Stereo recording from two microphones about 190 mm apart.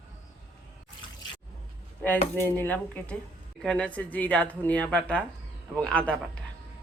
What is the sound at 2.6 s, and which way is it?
A man's voice, 10° left (ahead or behind).